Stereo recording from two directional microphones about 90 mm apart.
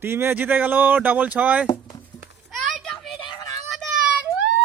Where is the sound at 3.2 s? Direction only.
45° left (ahead or behind).